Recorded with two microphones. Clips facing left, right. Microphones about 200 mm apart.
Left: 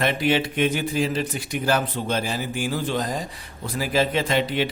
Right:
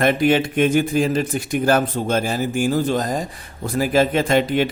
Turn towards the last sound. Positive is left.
turn(degrees=-50)  # may be behind; listen again after turning